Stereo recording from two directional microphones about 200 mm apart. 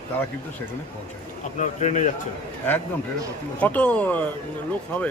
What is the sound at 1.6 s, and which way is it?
Speech, 35° left (ahead or behind).